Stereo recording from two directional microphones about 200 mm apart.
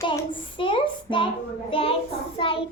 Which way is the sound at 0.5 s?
25° left (ahead or behind).